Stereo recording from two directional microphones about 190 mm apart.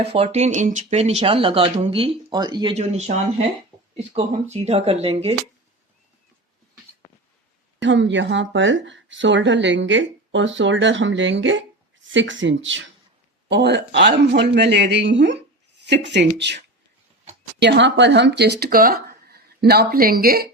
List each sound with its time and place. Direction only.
0.0 s speech: 30° right (ahead or behind)
2.7 s speech: 35° right (ahead or behind)
7.8 s speech: 70° right (ahead or behind)
13.5 s speech: 60° right (ahead or behind)
17.6 s speech: 65° right (ahead or behind)